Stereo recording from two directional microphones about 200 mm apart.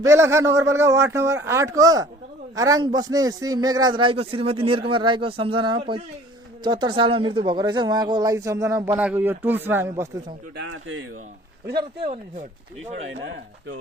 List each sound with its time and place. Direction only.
0.0 s a man's voice: 15° right (ahead or behind)
9.9 s a man's voice: 20° right (ahead or behind)
10.6 s speech: 90° right
11.6 s speech: 55° right (ahead or behind)
12.0 s speech: 35° right (ahead or behind)
13.1 s speech: 65° right (ahead or behind)